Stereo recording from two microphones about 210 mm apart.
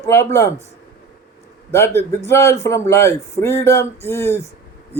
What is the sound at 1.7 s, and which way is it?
Speech, 10° left (ahead or behind).